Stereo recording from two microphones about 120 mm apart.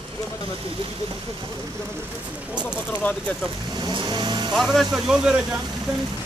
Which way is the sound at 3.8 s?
40° right (ahead or behind).